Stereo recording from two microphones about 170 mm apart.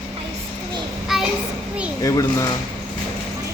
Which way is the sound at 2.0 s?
20° left (ahead or behind).